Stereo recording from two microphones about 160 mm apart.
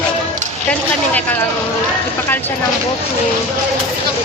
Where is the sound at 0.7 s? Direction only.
10° left (ahead or behind).